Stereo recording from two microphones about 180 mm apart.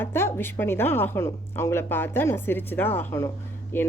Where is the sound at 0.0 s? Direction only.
15° left (ahead or behind).